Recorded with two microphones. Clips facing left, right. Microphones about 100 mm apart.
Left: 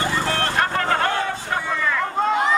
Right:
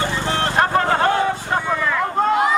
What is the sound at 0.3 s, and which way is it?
Vehicle, 20° right (ahead or behind).